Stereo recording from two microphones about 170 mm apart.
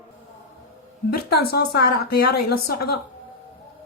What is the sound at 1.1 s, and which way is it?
A woman's voice, 65° left (ahead or behind).